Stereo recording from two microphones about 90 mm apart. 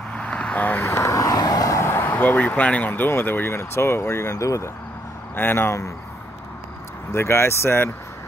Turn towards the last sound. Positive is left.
turn(degrees=25)  # may be behind; listen again after turning